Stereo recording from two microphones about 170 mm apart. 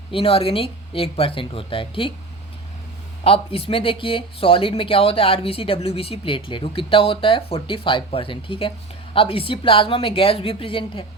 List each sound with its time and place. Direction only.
0.1 s speech: 35° left (ahead or behind)
3.2 s speech: 35° left (ahead or behind)